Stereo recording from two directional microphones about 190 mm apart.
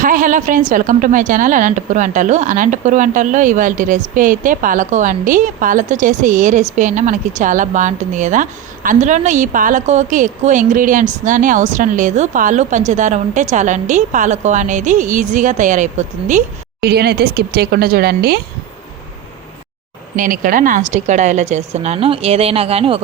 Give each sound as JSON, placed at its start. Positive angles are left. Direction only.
{"t": 0.0, "sound": "a woman's voice", "side_deg": -45}
{"t": 16.8, "sound": "speech", "side_deg": -55}
{"t": 20.1, "sound": "a woman's voice", "side_deg": -45}